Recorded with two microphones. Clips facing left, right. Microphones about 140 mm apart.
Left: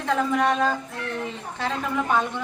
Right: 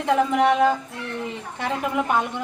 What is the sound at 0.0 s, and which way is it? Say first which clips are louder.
A woman's voice: right 3 dB; 15° right (ahead or behind).